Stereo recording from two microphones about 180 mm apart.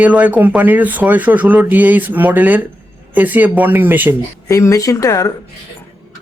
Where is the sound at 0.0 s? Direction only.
10° right (ahead or behind).